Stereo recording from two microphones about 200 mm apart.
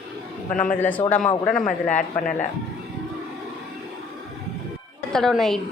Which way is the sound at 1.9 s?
40° left (ahead or behind).